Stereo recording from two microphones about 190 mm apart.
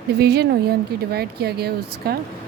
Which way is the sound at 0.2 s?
60° right (ahead or behind).